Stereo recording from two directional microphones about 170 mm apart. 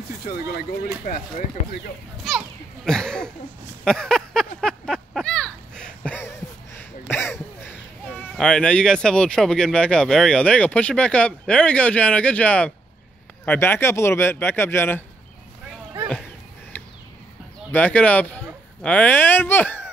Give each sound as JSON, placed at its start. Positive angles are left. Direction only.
{"t": 1.6, "sound": "speech", "side_deg": 40}
{"t": 2.2, "sound": "children playing", "side_deg": 0}
{"t": 3.8, "sound": "a sound", "side_deg": 5}
{"t": 7.1, "sound": "speech", "side_deg": 15}
{"t": 16.7, "sound": "a sound", "side_deg": 10}
{"t": 17.6, "sound": "speech", "side_deg": 10}